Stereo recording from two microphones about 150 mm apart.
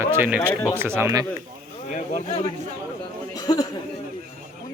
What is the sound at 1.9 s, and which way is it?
Speech, 50° left (ahead or behind).